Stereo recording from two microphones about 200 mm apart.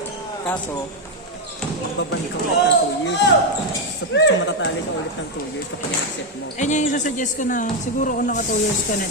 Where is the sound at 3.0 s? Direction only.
60° left (ahead or behind).